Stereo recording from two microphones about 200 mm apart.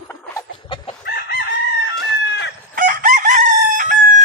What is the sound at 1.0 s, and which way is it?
Chicken, 50° left (ahead or behind).